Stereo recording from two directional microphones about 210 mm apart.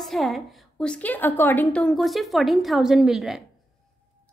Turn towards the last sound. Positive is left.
turn(degrees=0)  # may be behind; listen again after turning